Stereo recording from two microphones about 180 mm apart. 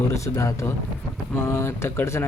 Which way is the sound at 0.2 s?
15° left (ahead or behind).